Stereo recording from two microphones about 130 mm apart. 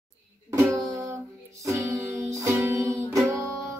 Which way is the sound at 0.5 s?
20° right (ahead or behind).